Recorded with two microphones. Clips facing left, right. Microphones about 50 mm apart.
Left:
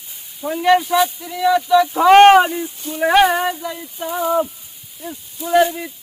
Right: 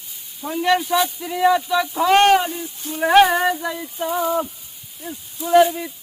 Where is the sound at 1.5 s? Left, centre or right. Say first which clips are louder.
Left 6 dB; centre.